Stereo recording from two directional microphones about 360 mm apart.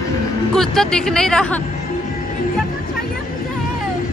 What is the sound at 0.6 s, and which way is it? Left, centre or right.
Speech, centre.